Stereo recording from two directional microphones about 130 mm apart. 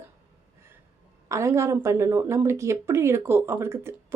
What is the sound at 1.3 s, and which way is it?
A woman's voice, 20° right (ahead or behind).